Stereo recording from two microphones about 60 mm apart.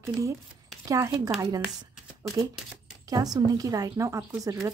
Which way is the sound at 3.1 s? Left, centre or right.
Right.